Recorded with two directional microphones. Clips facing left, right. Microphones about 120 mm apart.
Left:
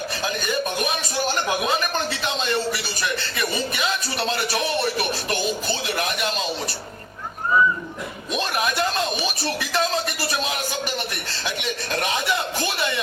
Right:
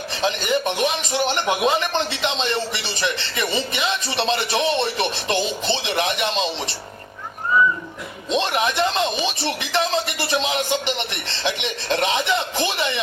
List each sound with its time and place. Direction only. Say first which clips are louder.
0.1 s speech: right 8 dB; 25° right (ahead or behind)
8.3 s speech: right 4 dB; 25° right (ahead or behind)